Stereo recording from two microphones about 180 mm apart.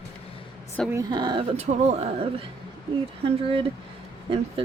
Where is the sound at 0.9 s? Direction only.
20° right (ahead or behind); by 2.1 s 35° right (ahead or behind).